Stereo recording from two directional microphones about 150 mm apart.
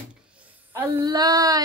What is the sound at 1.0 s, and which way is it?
Child singing, 25° right (ahead or behind).